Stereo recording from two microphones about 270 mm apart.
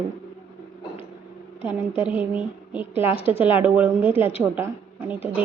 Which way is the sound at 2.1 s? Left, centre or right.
Centre.